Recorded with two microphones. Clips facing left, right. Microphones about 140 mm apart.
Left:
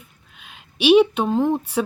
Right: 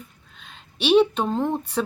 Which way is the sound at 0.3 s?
10° left (ahead or behind).